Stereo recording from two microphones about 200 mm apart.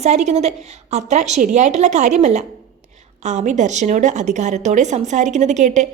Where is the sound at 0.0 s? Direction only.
35° right (ahead or behind).